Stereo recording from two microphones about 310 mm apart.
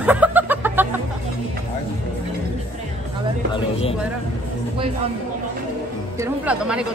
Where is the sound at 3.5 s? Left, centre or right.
Centre.